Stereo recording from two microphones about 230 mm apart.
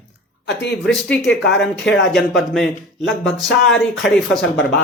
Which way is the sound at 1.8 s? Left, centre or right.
Left.